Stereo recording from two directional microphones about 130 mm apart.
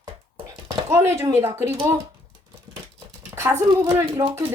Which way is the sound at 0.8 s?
20° right (ahead or behind).